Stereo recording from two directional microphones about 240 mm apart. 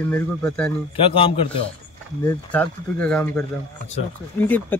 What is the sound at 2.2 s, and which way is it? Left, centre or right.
Speech, centre.